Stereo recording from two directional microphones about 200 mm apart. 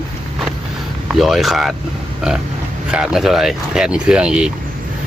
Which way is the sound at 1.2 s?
Centre (ahead or behind).